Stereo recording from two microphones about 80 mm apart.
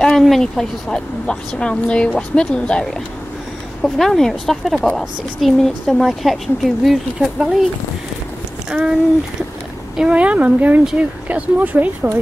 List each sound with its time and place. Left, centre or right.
0.2 s speech: centre
8.7 s speech: centre
9.9 s speech: centre